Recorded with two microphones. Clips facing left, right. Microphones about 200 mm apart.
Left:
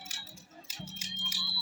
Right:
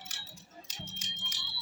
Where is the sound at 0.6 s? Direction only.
10° left (ahead or behind).